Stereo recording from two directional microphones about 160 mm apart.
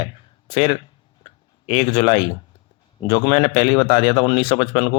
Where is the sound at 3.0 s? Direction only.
30° left (ahead or behind).